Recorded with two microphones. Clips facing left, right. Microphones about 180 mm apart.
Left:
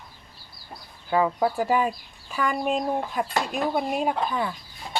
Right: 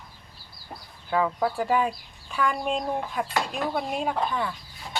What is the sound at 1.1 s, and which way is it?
Speech, 10° left (ahead or behind).